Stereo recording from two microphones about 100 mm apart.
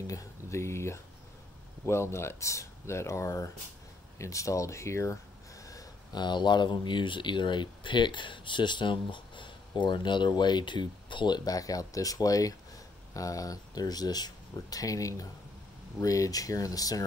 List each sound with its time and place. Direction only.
0.0 s speech: 35° left (ahead or behind)
5.7 s speech: 40° left (ahead or behind)